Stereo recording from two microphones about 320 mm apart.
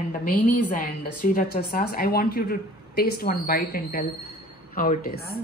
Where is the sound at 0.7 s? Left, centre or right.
Left.